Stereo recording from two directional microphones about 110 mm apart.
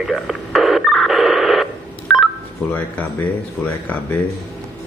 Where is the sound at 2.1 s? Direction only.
Centre (ahead or behind).